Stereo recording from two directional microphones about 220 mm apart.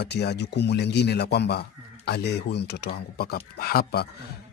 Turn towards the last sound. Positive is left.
turn(degrees=45)  # may be behind; listen again after turning